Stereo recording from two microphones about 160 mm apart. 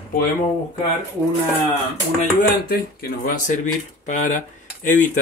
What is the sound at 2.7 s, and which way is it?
Speech, 65° left (ahead or behind).